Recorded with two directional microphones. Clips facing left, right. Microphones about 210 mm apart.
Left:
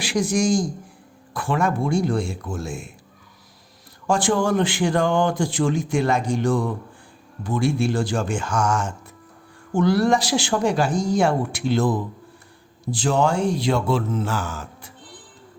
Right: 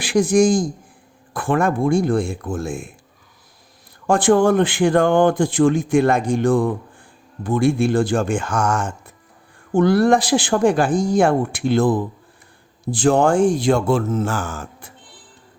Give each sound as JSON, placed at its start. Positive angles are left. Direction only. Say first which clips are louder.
{"t": 0.0, "sound": "speech", "louder": "right 6 dB", "side_deg": -55}
{"t": 4.0, "sound": "speech", "louder": "right 6 dB", "side_deg": -55}